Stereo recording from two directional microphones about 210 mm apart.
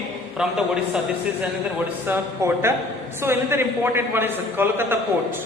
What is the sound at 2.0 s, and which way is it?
A man's voice, 10° right (ahead or behind).